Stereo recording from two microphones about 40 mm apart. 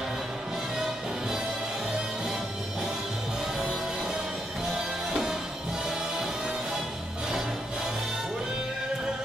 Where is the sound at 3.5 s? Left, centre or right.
Centre.